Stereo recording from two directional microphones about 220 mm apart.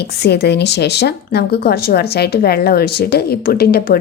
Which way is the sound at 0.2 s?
50° left (ahead or behind).